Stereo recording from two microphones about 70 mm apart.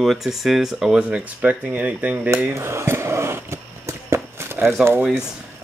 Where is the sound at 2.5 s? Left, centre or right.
Right.